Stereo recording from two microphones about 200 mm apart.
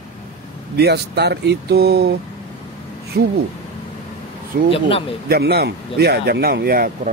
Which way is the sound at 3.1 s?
50° right (ahead or behind).